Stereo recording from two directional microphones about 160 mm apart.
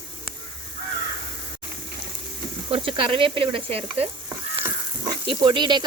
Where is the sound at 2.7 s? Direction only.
35° right (ahead or behind).